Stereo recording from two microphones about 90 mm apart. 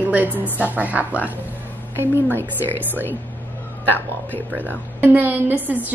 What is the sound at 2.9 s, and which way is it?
Speech, 20° left (ahead or behind).